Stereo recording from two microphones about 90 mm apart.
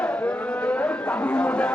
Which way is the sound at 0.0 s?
20° left (ahead or behind).